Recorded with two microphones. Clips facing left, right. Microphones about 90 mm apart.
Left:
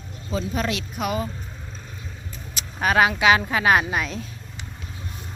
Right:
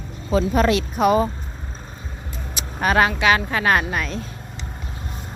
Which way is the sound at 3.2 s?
15° left (ahead or behind).